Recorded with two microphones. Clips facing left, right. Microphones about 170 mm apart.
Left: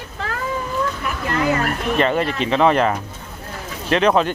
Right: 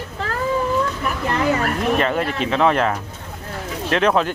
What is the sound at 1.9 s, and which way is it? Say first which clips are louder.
Speech: left 2 dB; centre (ahead or behind).